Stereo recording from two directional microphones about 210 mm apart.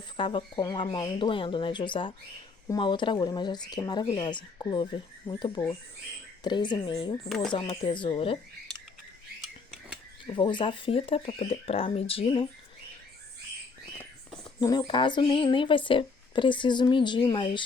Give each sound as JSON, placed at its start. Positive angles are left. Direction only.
{"t": 0.2, "sound": "speech", "side_deg": 25}
{"t": 7.3, "sound": "speech", "side_deg": 0}
{"t": 7.5, "sound": "speech", "side_deg": 25}
{"t": 10.3, "sound": "speech", "side_deg": 25}
{"t": 14.6, "sound": "speech", "side_deg": 20}